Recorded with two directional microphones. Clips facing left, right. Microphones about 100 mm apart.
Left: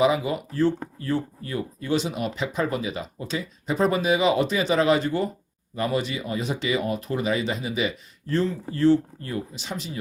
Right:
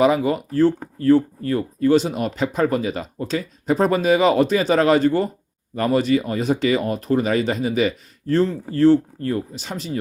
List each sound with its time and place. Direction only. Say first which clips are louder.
0.0 s speech: right 4 dB; 45° right (ahead or behind)